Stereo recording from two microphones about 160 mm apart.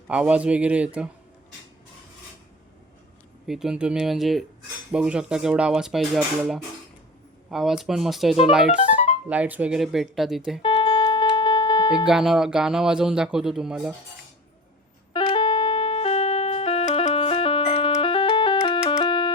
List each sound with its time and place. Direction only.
0.1 s a man's voice: 5° right (ahead or behind)
3.4 s speech: centre (ahead or behind)
10.6 s music: 30° left (ahead or behind)
12.0 s speech: 5° right (ahead or behind)
15.1 s music: 30° left (ahead or behind)